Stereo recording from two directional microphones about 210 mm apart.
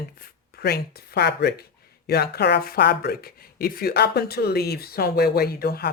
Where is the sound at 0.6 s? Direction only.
50° left (ahead or behind).